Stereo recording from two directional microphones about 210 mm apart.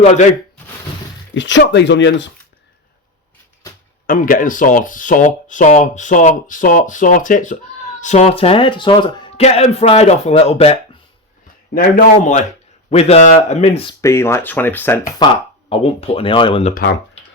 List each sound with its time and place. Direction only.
0.0 s speech: 35° left (ahead or behind)
1.3 s speech: 60° left (ahead or behind)
4.0 s a man's voice: 40° left (ahead or behind)
14.0 s speech: 15° left (ahead or behind)
15.7 s a man's voice: 25° left (ahead or behind)